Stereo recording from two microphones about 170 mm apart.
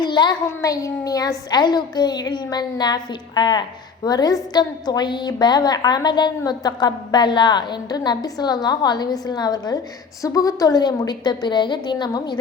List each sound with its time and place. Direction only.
0.0 s a woman's voice: 25° left (ahead or behind)